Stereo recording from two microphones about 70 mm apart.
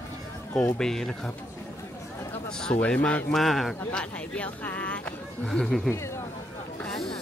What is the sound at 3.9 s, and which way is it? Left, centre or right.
Speech, centre.